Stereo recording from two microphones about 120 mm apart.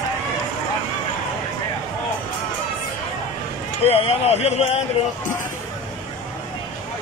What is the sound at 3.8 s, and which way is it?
Speech, 55° left (ahead or behind).